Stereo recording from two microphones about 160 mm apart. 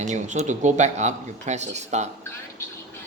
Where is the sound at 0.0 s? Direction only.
45° right (ahead or behind).